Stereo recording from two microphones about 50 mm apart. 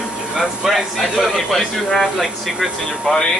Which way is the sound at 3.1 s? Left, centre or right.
Centre.